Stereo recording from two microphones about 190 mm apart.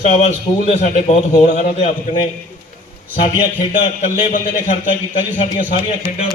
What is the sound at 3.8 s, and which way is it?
Speech, 25° left (ahead or behind).